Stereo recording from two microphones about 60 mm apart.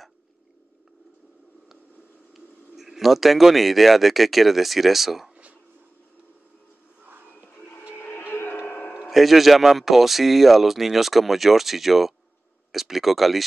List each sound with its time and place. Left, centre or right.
2.3 s speech: centre
8.0 s music: left
9.1 s speech: centre